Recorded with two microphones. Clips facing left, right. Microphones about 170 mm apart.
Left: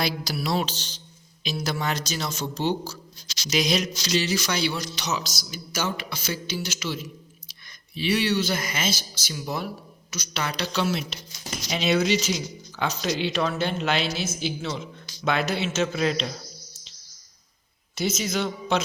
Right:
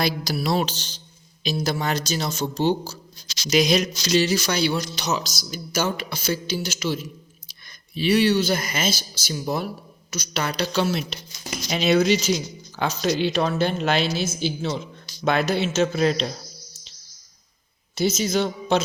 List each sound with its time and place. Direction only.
0.0 s a sound: 40° right (ahead or behind)
1.5 s speech: 35° right (ahead or behind)
3.5 s speech: 45° right (ahead or behind)
17.9 s speech: 30° right (ahead or behind)